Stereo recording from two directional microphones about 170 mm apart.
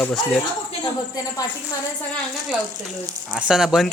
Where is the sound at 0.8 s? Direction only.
20° left (ahead or behind).